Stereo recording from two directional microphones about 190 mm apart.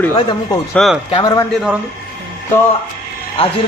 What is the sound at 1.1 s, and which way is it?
Speech, 20° left (ahead or behind).